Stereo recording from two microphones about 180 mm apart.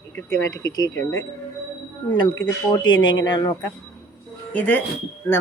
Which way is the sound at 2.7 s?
25° left (ahead or behind).